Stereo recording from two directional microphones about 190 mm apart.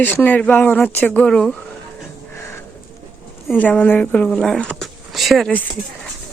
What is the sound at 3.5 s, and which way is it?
Speech, 10° left (ahead or behind).